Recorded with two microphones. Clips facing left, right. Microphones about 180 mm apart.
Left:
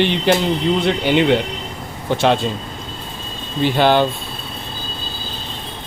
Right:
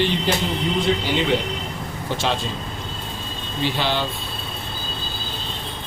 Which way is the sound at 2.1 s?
60° left (ahead or behind).